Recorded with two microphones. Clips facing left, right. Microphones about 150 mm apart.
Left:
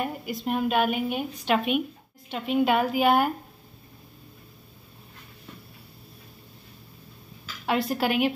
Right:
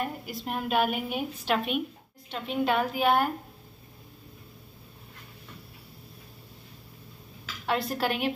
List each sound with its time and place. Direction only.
0.0 s a woman's voice: centre (ahead or behind)
7.6 s a woman's voice: 5° left (ahead or behind)